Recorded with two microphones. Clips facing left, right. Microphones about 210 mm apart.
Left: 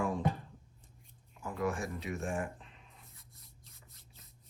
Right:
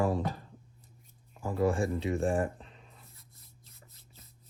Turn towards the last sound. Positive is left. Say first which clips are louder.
# right 1 dB
turn(degrees=0)  # may be behind; listen again after turning